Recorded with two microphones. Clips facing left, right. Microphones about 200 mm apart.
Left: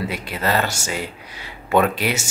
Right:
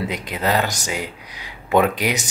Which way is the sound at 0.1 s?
15° right (ahead or behind).